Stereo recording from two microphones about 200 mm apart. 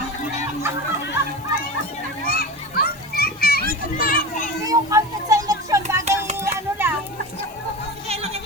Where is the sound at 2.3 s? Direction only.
50° left (ahead or behind).